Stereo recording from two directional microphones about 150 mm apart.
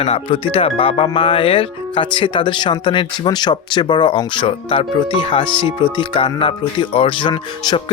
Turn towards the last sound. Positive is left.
turn(degrees=30)  # may be behind; listen again after turning